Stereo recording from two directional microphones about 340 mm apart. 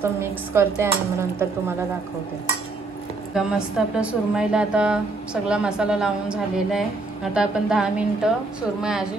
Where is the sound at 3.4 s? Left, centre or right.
Centre.